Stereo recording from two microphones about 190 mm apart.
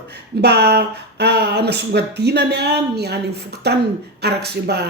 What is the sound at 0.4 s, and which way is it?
Speech, 60° right (ahead or behind).